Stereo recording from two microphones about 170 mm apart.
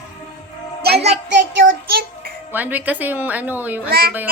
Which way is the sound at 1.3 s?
90° right.